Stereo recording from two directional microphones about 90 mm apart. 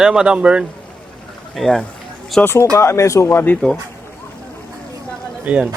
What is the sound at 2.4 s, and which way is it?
A man's voice, 25° left (ahead or behind).